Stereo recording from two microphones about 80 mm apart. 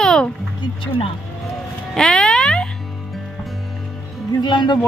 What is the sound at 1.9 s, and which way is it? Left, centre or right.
Music, centre.